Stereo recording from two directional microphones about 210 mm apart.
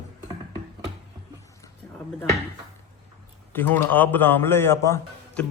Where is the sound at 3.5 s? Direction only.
10° left (ahead or behind).